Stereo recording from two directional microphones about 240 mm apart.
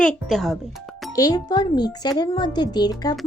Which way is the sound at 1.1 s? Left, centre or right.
Centre.